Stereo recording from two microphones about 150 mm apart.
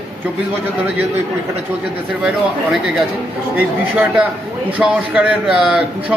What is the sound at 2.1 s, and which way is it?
A man's voice, 5° right (ahead or behind).